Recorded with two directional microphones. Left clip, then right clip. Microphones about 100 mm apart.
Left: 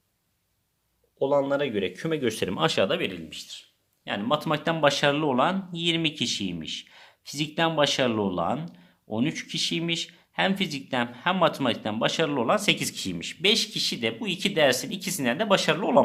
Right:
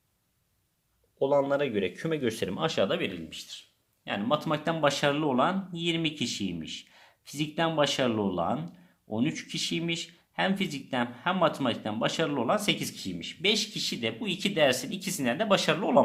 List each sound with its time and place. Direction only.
1.2 s speech: 5° left (ahead or behind); by 2.8 s 35° left (ahead or behind)
2.8 s speech: 15° left (ahead or behind)
4.4 s speech: 35° left (ahead or behind)
12.8 s speech: 65° left (ahead or behind); by 13.3 s 90° left
13.4 s speech: 45° left (ahead or behind); by 16.0 s 20° left (ahead or behind)